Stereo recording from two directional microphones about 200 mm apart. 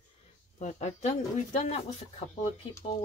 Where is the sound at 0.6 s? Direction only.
35° left (ahead or behind).